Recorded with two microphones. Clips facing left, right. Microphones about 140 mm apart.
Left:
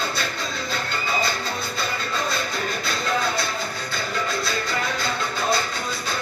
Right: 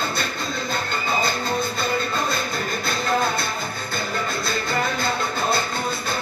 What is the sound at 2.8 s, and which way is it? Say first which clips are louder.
Music: right 3 dB; 55° right (ahead or behind).